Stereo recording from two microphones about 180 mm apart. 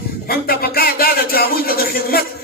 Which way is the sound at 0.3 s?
55° left (ahead or behind).